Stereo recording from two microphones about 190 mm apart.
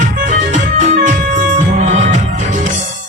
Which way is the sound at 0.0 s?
40° right (ahead or behind).